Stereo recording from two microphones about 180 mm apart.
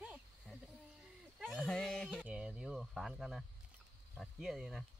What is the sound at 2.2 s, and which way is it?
Cricket, 5° right (ahead or behind).